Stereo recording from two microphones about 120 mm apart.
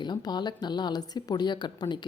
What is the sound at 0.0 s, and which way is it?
Speech, 35° left (ahead or behind).